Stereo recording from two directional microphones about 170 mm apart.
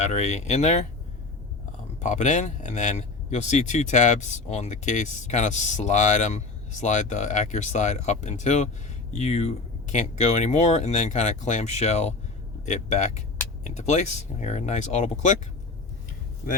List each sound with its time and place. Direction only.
0.1 s a man's voice: 40° left (ahead or behind)
2.0 s a man's voice: 45° left (ahead or behind)